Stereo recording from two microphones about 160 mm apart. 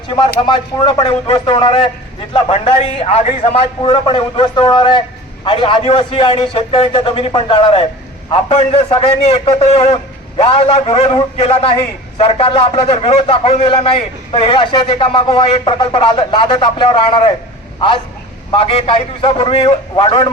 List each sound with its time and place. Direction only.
0.2 s a man's voice: 30° left (ahead or behind)
18.5 s a man's voice: 35° left (ahead or behind)